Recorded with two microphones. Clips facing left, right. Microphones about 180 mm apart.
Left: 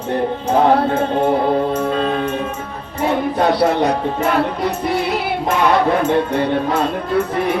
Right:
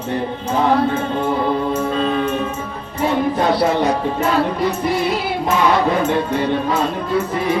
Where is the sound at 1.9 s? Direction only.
55° left (ahead or behind).